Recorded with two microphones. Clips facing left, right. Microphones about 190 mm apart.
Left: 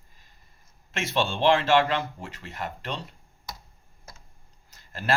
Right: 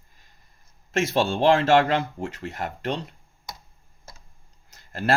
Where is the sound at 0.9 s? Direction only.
45° right (ahead or behind).